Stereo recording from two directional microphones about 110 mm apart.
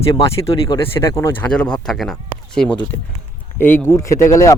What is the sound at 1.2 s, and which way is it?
Speech, 15° left (ahead or behind).